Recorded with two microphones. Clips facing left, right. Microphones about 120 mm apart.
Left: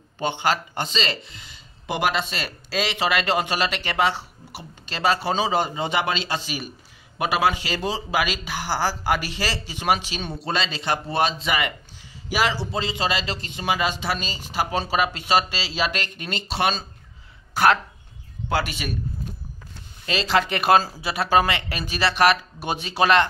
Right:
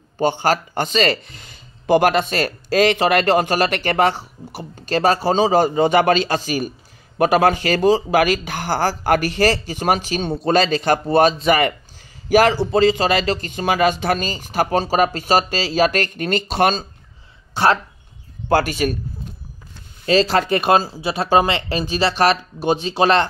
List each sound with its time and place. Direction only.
0.2 s speech: 40° right (ahead or behind)
17.6 s speech: 25° right (ahead or behind)
18.5 s speech: 45° right (ahead or behind)
20.1 s speech: 40° right (ahead or behind)